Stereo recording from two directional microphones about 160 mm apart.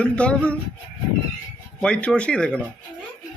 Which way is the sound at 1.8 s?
5° left (ahead or behind).